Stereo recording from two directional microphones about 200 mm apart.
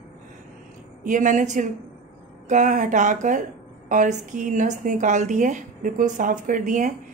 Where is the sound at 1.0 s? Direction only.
40° right (ahead or behind).